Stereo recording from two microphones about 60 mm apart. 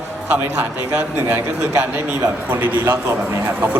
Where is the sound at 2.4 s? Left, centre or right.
Right.